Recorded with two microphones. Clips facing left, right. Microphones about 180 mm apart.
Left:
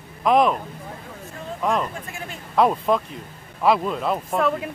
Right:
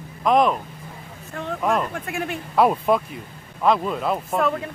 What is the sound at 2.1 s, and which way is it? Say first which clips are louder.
Speech: right 8 dB; 65° right (ahead or behind).